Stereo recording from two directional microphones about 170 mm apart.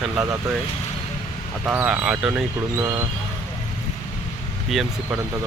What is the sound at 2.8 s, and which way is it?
Speech, 20° right (ahead or behind).